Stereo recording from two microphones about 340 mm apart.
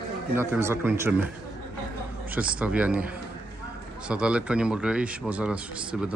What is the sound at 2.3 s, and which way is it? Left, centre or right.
Speech, centre.